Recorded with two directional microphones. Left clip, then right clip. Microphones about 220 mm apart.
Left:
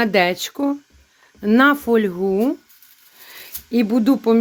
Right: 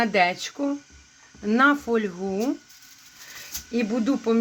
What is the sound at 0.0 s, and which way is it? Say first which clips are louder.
Speech: left 4 dB; 40° left (ahead or behind).